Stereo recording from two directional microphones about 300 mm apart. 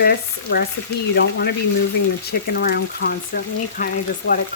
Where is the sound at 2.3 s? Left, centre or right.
Left.